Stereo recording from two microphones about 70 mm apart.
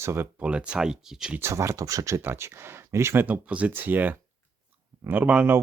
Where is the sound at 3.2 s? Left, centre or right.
Right.